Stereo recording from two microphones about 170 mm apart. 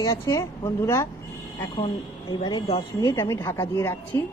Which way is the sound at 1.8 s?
30° left (ahead or behind).